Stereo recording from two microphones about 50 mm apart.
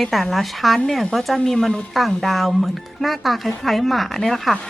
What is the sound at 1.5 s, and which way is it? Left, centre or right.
Speech, centre.